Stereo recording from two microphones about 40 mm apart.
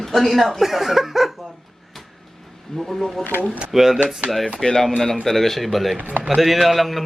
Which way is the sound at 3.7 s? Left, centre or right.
Centre.